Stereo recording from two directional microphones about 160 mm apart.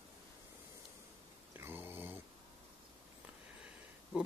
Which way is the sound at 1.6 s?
15° right (ahead or behind).